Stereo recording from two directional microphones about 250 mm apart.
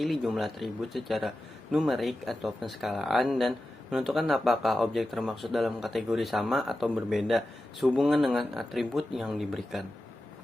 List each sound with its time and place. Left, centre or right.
0.0 s speech: centre